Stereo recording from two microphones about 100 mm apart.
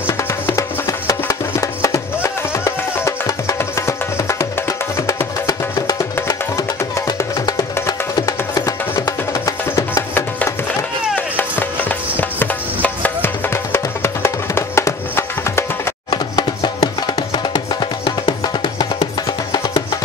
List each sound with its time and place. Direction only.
0.2 s music: 30° left (ahead or behind)
7.1 s music: 40° left (ahead or behind)
11.1 s music: 20° left (ahead or behind)
16.1 s music: 50° left (ahead or behind)